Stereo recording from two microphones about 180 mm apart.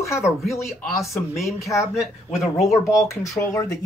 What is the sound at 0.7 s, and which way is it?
Speech, centre (ahead or behind).